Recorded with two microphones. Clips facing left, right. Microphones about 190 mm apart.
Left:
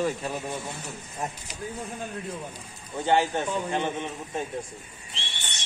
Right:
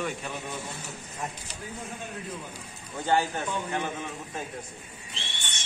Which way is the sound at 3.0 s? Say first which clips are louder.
Left 3 dB; 25° left (ahead or behind).